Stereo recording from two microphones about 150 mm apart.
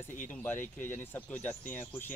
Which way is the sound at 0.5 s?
60° left (ahead or behind).